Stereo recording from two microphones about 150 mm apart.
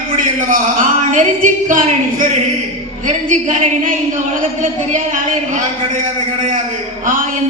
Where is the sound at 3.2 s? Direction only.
55° right (ahead or behind).